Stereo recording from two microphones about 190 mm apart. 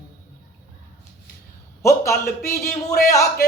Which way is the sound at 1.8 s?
15° left (ahead or behind).